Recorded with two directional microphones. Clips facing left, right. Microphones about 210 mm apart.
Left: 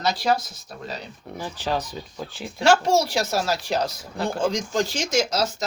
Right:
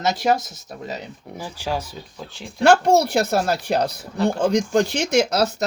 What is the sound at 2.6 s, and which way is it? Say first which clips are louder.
Speech: right 4 dB; 60° right (ahead or behind).